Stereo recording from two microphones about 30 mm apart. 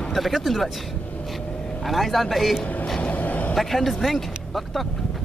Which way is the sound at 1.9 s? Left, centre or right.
Centre.